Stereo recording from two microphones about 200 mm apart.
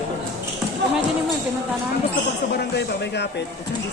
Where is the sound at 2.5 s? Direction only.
55° left (ahead or behind).